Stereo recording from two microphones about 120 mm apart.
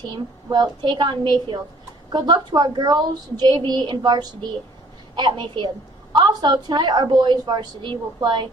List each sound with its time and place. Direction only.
0.1 s a woman's voice: 40° right (ahead or behind)